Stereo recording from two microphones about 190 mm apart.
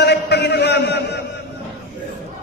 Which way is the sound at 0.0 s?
60° left (ahead or behind).